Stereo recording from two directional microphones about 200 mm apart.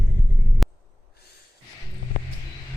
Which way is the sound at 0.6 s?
Centre (ahead or behind).